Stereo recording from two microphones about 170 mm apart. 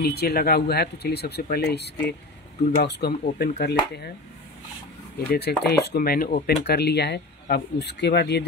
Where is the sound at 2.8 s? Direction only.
70° left (ahead or behind).